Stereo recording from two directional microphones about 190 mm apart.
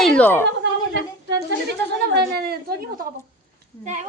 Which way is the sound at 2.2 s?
55° right (ahead or behind).